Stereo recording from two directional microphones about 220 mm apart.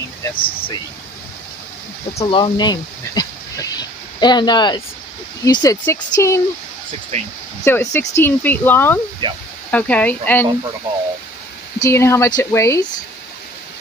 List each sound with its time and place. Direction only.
0.2 s speech: 25° left (ahead or behind)
2.1 s speech: 20° left (ahead or behind)
7.1 s speech: 30° right (ahead or behind)
7.6 s speech: 10° left (ahead or behind)
9.2 s speech: 20° right (ahead or behind)
9.7 s speech: 5° left (ahead or behind)
11.8 s speech: 10° left (ahead or behind)